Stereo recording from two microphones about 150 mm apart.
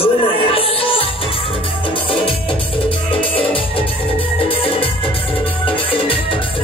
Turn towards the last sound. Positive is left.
turn(degrees=35)  # may be behind; listen again after turning